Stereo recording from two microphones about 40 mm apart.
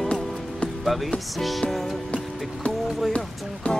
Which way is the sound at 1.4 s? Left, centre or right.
Centre.